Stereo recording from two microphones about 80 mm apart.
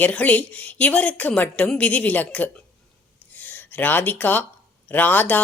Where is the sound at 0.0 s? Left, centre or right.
Centre.